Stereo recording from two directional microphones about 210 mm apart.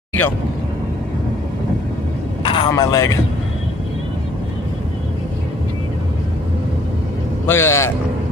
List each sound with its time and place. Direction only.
2.4 s a man's voice: 25° left (ahead or behind)
7.4 s a man's voice: 10° left (ahead or behind)